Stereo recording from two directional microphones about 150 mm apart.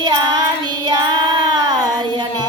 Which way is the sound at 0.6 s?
30° right (ahead or behind).